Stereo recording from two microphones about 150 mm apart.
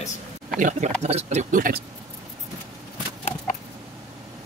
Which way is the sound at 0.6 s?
55° right (ahead or behind).